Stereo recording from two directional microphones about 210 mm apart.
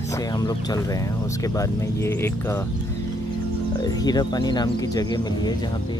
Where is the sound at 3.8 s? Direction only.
20° left (ahead or behind).